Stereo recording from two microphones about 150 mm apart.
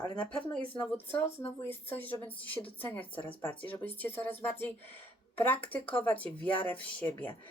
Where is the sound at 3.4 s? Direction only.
10° left (ahead or behind).